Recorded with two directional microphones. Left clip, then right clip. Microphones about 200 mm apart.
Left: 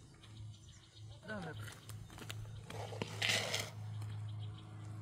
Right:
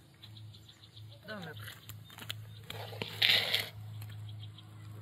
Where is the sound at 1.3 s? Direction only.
10° left (ahead or behind).